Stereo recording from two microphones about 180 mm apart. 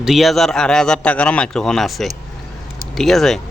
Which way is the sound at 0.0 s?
Centre (ahead or behind).